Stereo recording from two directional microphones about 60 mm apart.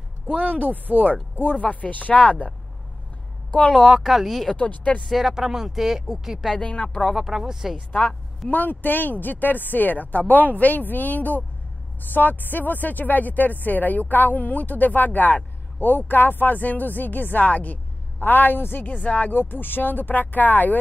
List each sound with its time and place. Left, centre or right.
0.3 s speech: right
1.4 s speech: left
3.7 s speech: centre
4.5 s speech: left
5.0 s speech: centre
6.5 s speech: centre
7.2 s speech: centre
7.7 s speech: centre
8.5 s speech: left